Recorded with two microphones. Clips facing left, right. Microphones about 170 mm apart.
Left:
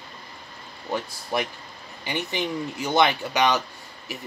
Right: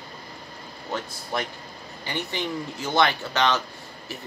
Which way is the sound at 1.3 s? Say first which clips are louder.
Left 2 dB; 10° left (ahead or behind).